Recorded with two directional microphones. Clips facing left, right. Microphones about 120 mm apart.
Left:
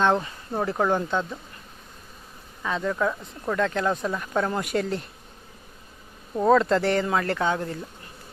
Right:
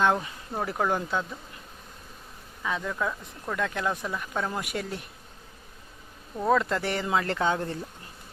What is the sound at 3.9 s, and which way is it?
Speech, 20° left (ahead or behind).